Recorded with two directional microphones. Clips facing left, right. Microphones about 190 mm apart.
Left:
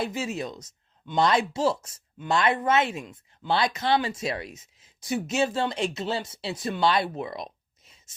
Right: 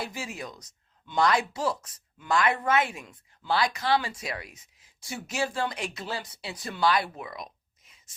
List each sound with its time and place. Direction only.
0.0 s speech: 20° left (ahead or behind)